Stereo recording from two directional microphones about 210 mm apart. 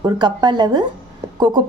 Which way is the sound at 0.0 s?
20° right (ahead or behind).